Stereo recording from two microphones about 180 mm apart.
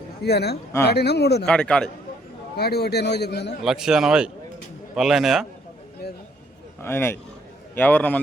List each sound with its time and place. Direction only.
0.2 s a man's voice: 65° left (ahead or behind)
1.5 s a man's voice: 5° left (ahead or behind)
2.6 s a man's voice: 60° left (ahead or behind)
3.6 s a man's voice: 5° right (ahead or behind)
6.8 s a man's voice: 10° left (ahead or behind)